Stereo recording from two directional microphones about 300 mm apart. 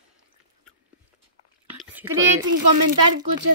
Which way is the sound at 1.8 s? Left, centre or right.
Centre.